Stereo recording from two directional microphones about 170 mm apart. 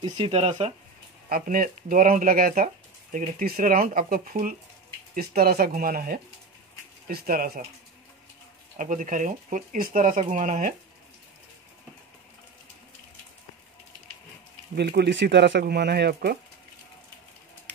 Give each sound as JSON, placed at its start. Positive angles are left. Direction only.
{"t": 0.0, "sound": "speech", "side_deg": -35}
{"t": 1.3, "sound": "speech", "side_deg": -55}
{"t": 5.1, "sound": "speech", "side_deg": -65}
{"t": 8.7, "sound": "speech", "side_deg": -50}
{"t": 14.8, "sound": "speech", "side_deg": -75}